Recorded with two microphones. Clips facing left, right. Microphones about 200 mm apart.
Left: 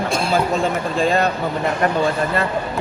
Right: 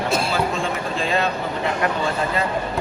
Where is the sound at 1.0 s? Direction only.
45° left (ahead or behind).